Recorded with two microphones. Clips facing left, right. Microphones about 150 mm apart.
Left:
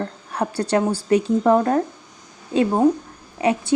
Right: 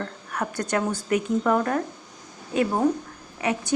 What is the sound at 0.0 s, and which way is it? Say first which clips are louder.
A woman's voice: left 5 dB; 30° left (ahead or behind).